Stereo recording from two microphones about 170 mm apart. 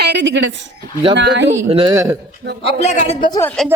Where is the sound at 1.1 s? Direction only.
90° right.